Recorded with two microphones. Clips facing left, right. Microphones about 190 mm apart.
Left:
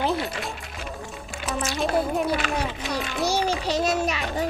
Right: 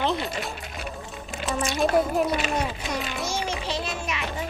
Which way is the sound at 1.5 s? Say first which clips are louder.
Right 2 dB; centre (ahead or behind).